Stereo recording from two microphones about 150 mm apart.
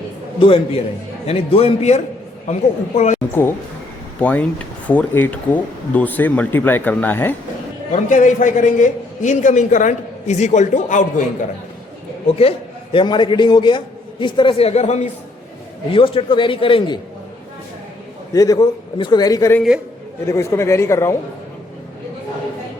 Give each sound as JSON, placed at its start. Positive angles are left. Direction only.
{"t": 0.3, "sound": "a man's voice", "side_deg": 35}
{"t": 4.2, "sound": "speech", "side_deg": 10}
{"t": 7.9, "sound": "a man's voice", "side_deg": 60}
{"t": 12.4, "sound": "a man's voice", "side_deg": 40}
{"t": 15.9, "sound": "a man's voice", "side_deg": 35}
{"t": 18.3, "sound": "a man's voice", "side_deg": 25}